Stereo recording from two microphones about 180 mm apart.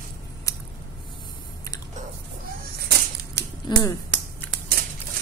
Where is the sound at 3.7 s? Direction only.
25° left (ahead or behind).